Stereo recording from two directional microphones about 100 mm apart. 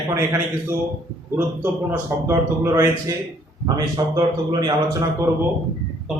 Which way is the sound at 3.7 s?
45° right (ahead or behind).